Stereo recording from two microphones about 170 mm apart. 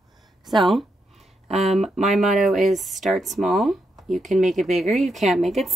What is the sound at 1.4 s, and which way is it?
Speech, 40° right (ahead or behind).